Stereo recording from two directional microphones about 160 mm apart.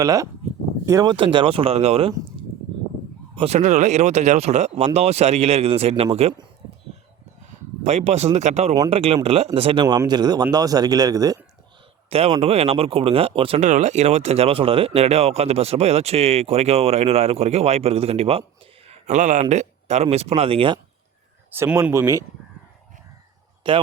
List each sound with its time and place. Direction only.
0.0 s speech: 20° right (ahead or behind)
1.1 s speech: 30° right (ahead or behind)
3.3 s speech: 40° right (ahead or behind)
7.9 s speech: 45° right (ahead or behind)
9.8 s speech: 25° right (ahead or behind)
12.3 s speech: 35° right (ahead or behind)
21.5 s speech: 15° right (ahead or behind)
23.6 s speech: 30° right (ahead or behind)